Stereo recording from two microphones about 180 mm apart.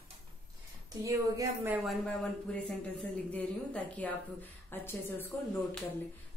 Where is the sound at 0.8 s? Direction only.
20° right (ahead or behind).